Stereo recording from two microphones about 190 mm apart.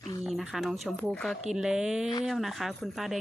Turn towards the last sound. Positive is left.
turn(degrees=0)  # may be behind; listen again after turning